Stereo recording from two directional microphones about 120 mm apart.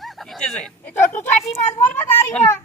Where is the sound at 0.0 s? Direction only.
Centre (ahead or behind).